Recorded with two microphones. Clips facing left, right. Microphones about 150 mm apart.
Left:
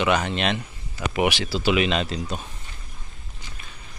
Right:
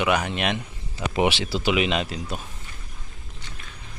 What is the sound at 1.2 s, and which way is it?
Speech, 25° right (ahead or behind).